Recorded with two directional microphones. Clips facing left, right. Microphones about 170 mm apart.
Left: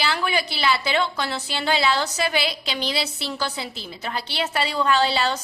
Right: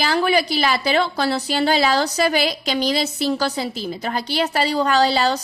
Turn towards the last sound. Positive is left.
turn(degrees=-40)  # may be behind; listen again after turning